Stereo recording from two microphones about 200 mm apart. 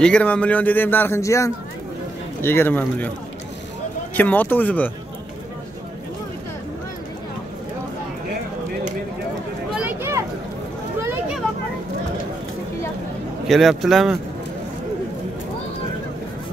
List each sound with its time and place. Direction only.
0.0 s a man's voice: 5° left (ahead or behind)
4.1 s a man's voice: 10° left (ahead or behind)
9.7 s a sound: 5° right (ahead or behind)
13.5 s speech: centre (ahead or behind)